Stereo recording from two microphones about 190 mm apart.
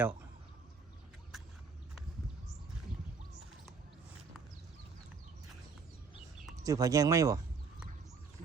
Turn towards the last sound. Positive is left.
turn(degrees=-15)  # may be behind; listen again after turning